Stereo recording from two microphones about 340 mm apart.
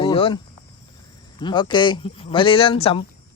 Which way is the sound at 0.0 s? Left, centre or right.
Centre.